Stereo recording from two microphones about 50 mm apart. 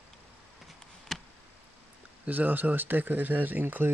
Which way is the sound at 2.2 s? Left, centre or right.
Right.